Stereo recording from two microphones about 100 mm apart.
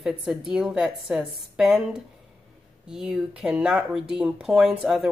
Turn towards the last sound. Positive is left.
turn(degrees=0)  # may be behind; listen again after turning